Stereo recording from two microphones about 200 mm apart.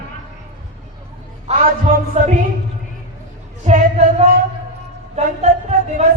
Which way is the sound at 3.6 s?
35° right (ahead or behind).